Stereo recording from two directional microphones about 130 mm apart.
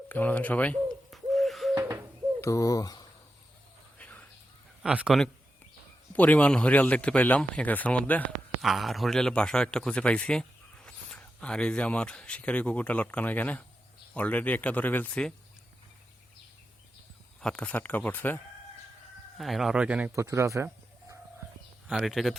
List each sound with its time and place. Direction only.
0.1 s a man's voice: 15° left (ahead or behind)
1.1 s bird: centre (ahead or behind)
2.4 s speech: 25° left (ahead or behind)
3.9 s a sound: 10° left (ahead or behind)
4.8 s a man's voice: 5° right (ahead or behind)
6.1 s a man's voice: 10° left (ahead or behind)
8.6 s a man's voice: centre (ahead or behind)
17.4 s a man's voice: 10° left (ahead or behind)
19.4 s a man's voice: centre (ahead or behind)
20.1 s speech: 25° right (ahead or behind)
21.8 s a man's voice: centre (ahead or behind)